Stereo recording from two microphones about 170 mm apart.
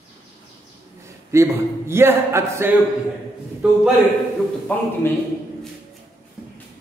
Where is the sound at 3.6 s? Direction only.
5° right (ahead or behind).